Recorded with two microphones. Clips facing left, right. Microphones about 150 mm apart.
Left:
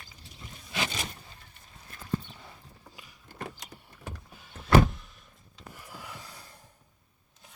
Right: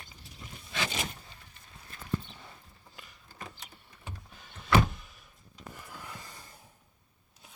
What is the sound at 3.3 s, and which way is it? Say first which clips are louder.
Power windows: left 6 dB; 65° left (ahead or behind).